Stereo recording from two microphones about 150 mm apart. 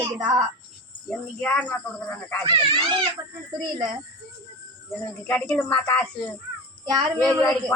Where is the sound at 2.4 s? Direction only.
35° right (ahead or behind).